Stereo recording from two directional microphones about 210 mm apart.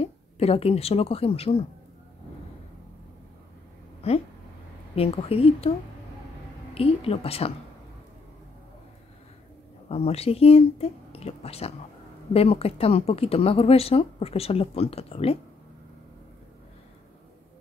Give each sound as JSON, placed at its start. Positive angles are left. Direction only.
{"t": 0.0, "sound": "speech", "side_deg": 30}
{"t": 4.0, "sound": "speech", "side_deg": 30}
{"t": 6.7, "sound": "speech", "side_deg": 30}
{"t": 9.8, "sound": "speech", "side_deg": 30}